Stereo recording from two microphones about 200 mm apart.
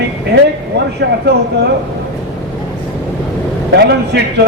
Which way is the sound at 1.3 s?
55° right (ahead or behind).